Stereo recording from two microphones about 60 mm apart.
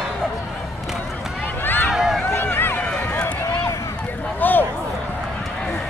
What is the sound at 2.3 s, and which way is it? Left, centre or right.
Run, left.